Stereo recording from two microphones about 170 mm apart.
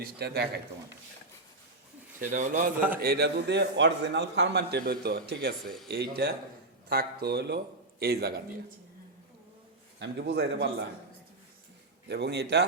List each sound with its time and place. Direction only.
0.0 s a man's voice: 70° right (ahead or behind)
2.3 s a man's voice: 50° right (ahead or behind)
3.0 s a man's voice: 65° right (ahead or behind)
5.6 s speech: centre (ahead or behind)
5.9 s a man's voice: 70° right (ahead or behind)
10.0 s a man's voice: 85° right
12.0 s a man's voice: 80° right